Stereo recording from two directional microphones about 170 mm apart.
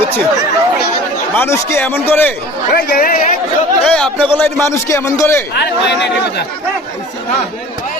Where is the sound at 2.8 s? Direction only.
60° left (ahead or behind).